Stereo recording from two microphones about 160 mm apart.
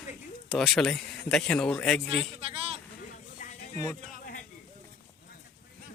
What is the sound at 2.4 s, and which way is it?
Speech, 35° right (ahead or behind).